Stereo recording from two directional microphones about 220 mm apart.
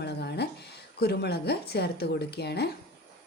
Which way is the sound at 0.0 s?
50° left (ahead or behind).